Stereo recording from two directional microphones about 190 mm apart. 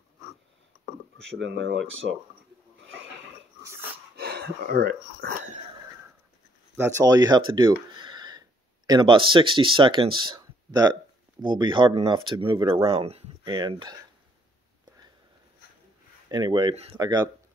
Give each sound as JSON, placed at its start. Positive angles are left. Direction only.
{"t": 1.2, "sound": "speech", "side_deg": -75}
{"t": 4.2, "sound": "speech", "side_deg": -60}
{"t": 6.8, "sound": "speech", "side_deg": -20}
{"t": 16.3, "sound": "speech", "side_deg": -20}